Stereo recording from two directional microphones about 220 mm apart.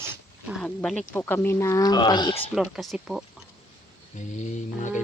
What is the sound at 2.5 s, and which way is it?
Speech, centre (ahead or behind).